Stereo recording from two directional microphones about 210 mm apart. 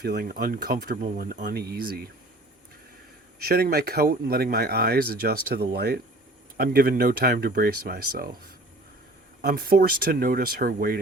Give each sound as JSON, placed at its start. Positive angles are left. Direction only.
{"t": 0.0, "sound": "speech", "side_deg": -50}
{"t": 3.3, "sound": "speech", "side_deg": -50}
{"t": 9.4, "sound": "speech", "side_deg": -45}